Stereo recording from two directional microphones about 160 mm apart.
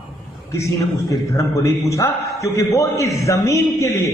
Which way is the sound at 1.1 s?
20° left (ahead or behind).